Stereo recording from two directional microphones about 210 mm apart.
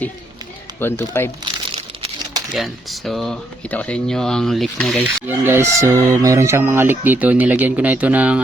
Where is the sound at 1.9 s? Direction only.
25° right (ahead or behind).